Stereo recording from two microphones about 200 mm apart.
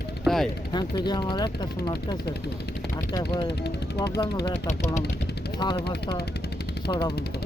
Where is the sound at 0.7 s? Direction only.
20° left (ahead or behind).